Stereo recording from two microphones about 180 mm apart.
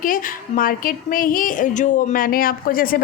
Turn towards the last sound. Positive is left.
turn(degrees=55)  # may be behind; listen again after turning